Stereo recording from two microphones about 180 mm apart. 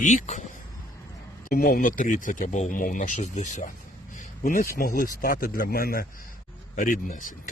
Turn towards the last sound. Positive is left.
turn(degrees=45)  # may be behind; listen again after turning